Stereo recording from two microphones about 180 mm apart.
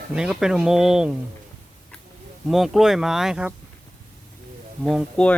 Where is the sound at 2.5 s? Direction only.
Centre (ahead or behind).